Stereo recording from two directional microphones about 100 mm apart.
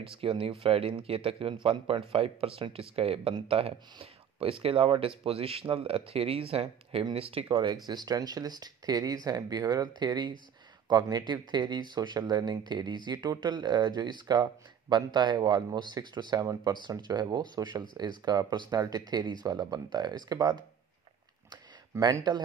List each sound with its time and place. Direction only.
0.0 s speech: 65° right (ahead or behind)
7.7 s speech: 40° right (ahead or behind)
21.9 s speech: 30° right (ahead or behind)